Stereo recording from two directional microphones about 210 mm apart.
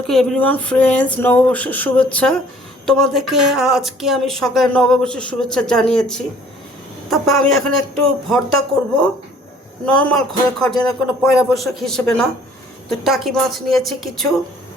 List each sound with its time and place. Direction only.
0.1 s speech: centre (ahead or behind)
9.8 s speech: 5° left (ahead or behind)